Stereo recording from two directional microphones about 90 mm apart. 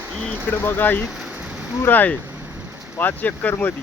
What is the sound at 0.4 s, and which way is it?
Speech, 25° left (ahead or behind).